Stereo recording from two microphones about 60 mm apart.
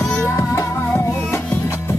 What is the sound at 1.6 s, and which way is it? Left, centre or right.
Music, left.